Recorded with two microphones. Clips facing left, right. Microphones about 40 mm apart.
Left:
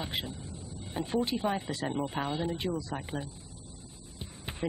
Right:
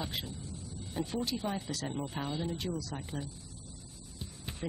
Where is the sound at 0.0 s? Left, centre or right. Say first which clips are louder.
Left 3 dB; left.